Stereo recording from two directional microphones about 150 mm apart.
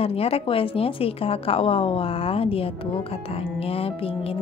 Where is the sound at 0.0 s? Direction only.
40° left (ahead or behind).